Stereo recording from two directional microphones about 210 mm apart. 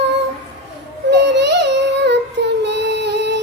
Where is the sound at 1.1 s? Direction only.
55° right (ahead or behind).